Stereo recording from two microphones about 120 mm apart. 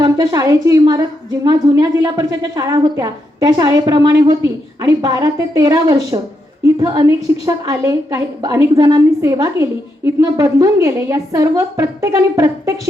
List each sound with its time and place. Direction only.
0.0 s a woman's voice: 30° right (ahead or behind)